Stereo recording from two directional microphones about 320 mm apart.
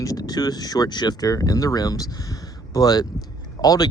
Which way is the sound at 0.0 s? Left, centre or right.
Centre.